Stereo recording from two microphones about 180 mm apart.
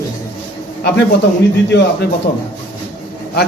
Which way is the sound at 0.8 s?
70° left (ahead or behind).